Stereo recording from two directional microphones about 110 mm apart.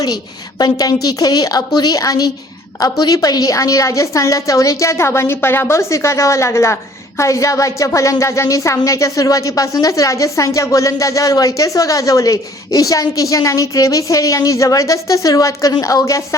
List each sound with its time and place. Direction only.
0.6 s a woman's voice: 35° left (ahead or behind)